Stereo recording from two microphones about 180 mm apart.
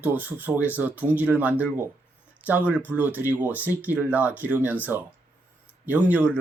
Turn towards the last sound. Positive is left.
turn(degrees=-10)  # may be behind; listen again after turning